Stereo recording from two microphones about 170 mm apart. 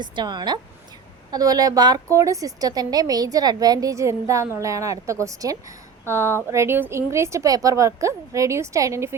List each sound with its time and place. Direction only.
0.0 s a woman's voice: 25° right (ahead or behind)